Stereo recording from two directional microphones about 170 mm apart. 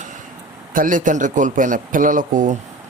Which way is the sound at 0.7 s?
50° right (ahead or behind).